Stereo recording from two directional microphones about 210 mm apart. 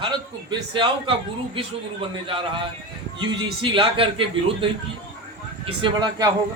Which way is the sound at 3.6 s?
25° right (ahead or behind).